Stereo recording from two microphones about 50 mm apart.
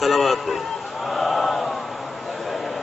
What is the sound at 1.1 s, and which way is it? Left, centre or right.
Chant, centre.